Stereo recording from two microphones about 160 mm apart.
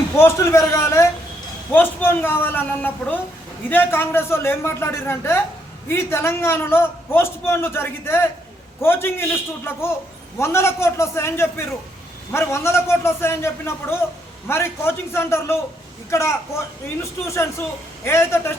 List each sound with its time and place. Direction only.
0.2 s a man's voice: 15° left (ahead or behind)